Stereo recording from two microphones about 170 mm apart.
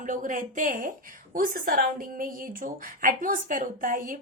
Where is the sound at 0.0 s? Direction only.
50° right (ahead or behind).